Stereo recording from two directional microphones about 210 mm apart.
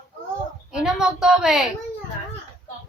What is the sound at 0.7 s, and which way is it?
Speech, 5° right (ahead or behind).